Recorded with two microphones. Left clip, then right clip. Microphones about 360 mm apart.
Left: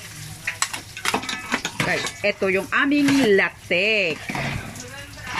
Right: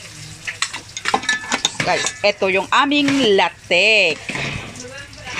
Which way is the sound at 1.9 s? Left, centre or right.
Right.